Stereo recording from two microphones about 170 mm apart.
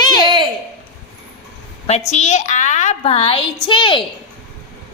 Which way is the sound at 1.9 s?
40° left (ahead or behind).